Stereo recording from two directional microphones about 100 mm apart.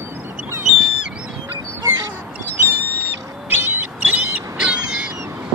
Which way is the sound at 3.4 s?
20° right (ahead or behind).